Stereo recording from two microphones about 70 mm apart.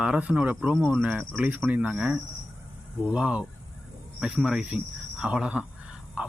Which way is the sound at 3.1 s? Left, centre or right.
Centre.